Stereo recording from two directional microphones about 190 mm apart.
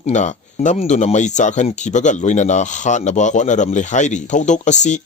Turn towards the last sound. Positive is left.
turn(degrees=40)  # may be behind; listen again after turning